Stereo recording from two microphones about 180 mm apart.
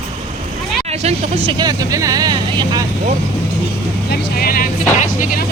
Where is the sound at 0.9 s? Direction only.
35° right (ahead or behind).